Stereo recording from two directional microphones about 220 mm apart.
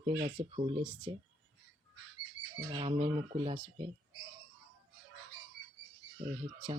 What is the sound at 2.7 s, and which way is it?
Speech, 25° right (ahead or behind).